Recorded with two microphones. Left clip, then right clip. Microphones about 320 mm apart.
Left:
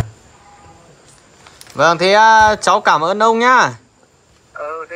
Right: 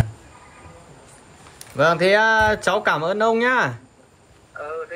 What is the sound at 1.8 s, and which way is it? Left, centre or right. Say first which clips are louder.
Speech: left 6 dB; centre.